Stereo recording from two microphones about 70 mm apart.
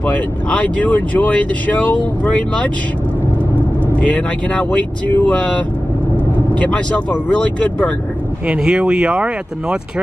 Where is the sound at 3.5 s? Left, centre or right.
Right.